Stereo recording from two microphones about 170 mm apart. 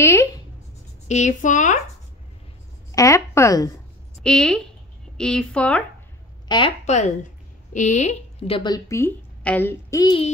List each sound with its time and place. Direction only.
0.0 s writing: 15° left (ahead or behind)
1.0 s speech: 45° left (ahead or behind)
2.9 s a sound: 20° left (ahead or behind)
4.2 s a woman's voice: 5° left (ahead or behind)
6.8 s a woman's voice: 45° left (ahead or behind); by 10.1 s 20° left (ahead or behind)